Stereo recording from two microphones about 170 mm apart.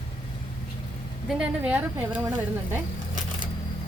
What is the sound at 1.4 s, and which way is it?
Speech, 5° right (ahead or behind).